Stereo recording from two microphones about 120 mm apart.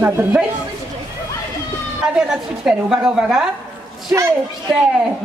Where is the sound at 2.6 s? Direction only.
5° right (ahead or behind).